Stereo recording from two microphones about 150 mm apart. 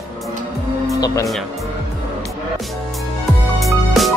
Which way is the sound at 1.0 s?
20° left (ahead or behind).